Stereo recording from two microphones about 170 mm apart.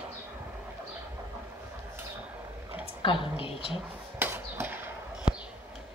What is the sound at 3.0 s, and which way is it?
Speech, 30° left (ahead or behind).